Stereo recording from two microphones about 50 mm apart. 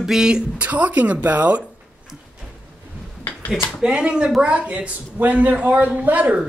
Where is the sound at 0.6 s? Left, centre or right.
Right.